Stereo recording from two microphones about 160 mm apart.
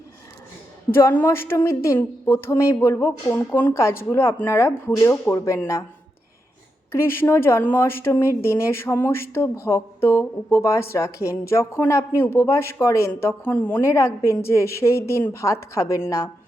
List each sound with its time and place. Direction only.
0.9 s a woman's voice: 15° left (ahead or behind)
6.9 s a woman's voice: 15° left (ahead or behind)